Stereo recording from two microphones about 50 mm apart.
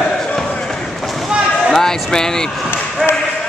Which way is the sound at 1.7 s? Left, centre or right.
Centre.